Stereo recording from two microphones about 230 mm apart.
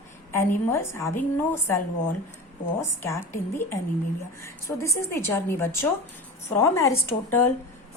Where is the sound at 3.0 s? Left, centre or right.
Centre.